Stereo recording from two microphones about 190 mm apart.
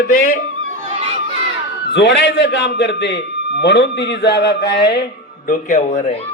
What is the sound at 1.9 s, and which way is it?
A man's voice, 70° left (ahead or behind).